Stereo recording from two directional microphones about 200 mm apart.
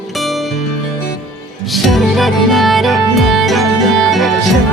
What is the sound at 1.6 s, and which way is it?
Music, centre (ahead or behind).